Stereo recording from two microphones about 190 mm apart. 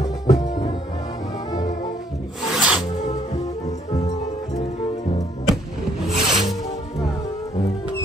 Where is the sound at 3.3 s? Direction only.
35° left (ahead or behind).